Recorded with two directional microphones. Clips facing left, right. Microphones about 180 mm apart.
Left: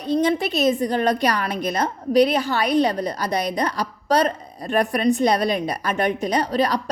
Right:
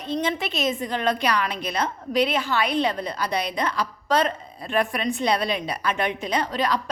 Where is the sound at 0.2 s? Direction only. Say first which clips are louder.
Left 6 dB; 40° left (ahead or behind).